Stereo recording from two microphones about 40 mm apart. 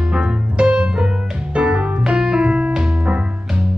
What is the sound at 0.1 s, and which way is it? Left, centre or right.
Music, right.